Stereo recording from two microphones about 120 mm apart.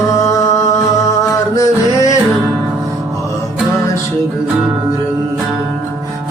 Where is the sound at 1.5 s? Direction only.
25° left (ahead or behind).